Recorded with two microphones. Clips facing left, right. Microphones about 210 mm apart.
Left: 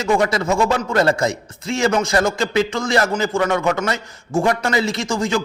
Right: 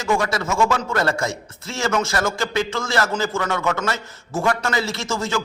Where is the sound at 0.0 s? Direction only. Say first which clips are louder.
Left 4 dB; 20° left (ahead or behind).